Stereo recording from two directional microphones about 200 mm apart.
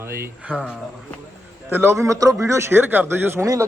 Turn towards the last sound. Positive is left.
turn(degrees=-15)  # may be behind; listen again after turning